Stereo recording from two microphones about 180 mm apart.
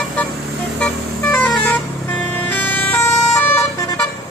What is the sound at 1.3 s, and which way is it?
Vehicle, 5° left (ahead or behind).